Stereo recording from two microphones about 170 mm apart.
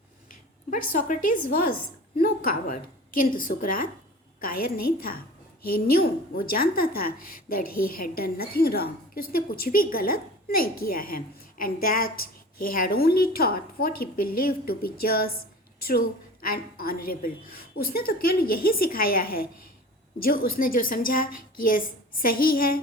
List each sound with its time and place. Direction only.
0.7 s a woman's voice: 50° left (ahead or behind)